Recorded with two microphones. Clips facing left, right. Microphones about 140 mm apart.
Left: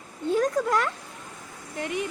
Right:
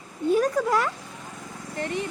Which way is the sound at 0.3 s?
10° right (ahead or behind).